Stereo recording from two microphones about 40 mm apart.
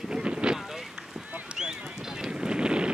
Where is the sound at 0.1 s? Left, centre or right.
Right.